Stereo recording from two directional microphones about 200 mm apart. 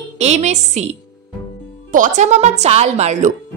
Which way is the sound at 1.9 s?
40° right (ahead or behind).